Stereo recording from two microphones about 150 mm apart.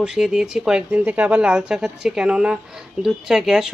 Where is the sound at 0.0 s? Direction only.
5° right (ahead or behind).